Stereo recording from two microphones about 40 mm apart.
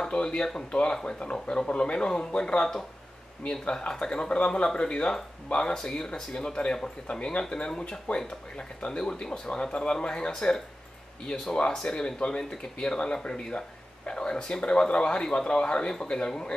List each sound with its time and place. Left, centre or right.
0.0 s speech: left